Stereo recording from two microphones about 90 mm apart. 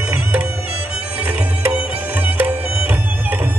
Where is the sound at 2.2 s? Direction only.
20° right (ahead or behind).